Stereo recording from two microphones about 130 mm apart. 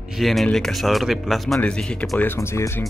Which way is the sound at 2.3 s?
20° left (ahead or behind).